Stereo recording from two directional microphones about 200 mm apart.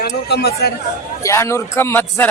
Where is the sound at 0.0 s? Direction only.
55° left (ahead or behind).